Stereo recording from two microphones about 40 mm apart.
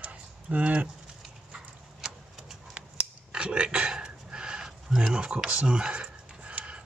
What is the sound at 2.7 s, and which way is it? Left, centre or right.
Scissors, right.